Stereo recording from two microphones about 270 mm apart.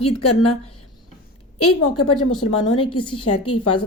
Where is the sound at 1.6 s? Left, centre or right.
Left.